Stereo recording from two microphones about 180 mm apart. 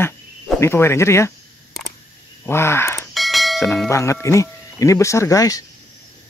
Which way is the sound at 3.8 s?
15° left (ahead or behind).